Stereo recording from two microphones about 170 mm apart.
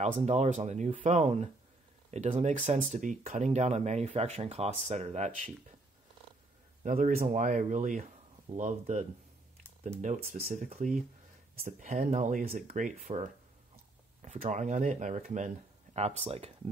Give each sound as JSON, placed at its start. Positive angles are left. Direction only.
{"t": 0.0, "sound": "speech", "side_deg": -40}
{"t": 6.8, "sound": "speech", "side_deg": -50}